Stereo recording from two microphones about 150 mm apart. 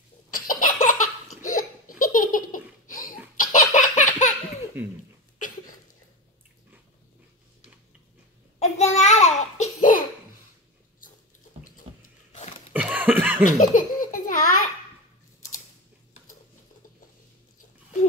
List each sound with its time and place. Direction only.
0.3 s laughter: 65° left (ahead or behind)
3.3 s laughter: 55° left (ahead or behind)
8.5 s babbling: 45° left (ahead or behind); by 10.0 s 60° left (ahead or behind)
12.7 s a sound: 10° right (ahead or behind)
13.5 s baby laughter: 60° left (ahead or behind)